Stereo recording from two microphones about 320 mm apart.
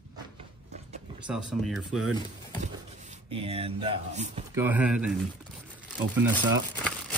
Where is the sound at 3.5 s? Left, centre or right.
Centre.